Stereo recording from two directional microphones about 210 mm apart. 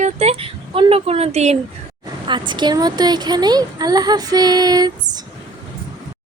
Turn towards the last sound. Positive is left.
turn(degrees=-20)  # may be behind; listen again after turning